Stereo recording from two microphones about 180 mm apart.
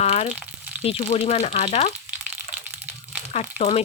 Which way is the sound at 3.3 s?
40° left (ahead or behind).